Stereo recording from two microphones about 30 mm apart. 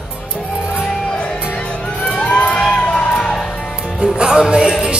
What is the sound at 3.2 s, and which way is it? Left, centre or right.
Music, centre.